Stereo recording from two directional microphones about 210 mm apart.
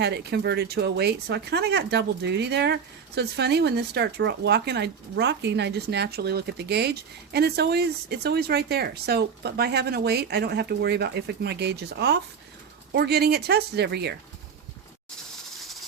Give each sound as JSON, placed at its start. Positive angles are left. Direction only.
{"t": 0.0, "sound": "speech", "side_deg": -50}